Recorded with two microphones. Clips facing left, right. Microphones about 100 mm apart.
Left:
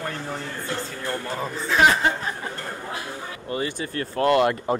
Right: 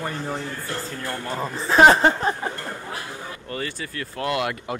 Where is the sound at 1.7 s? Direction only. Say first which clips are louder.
Right 5 dB; 35° right (ahead or behind).